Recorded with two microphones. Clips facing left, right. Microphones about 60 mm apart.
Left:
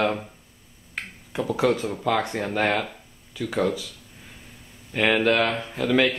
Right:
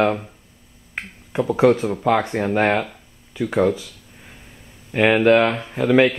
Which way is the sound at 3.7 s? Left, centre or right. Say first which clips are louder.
Right 5 dB; centre.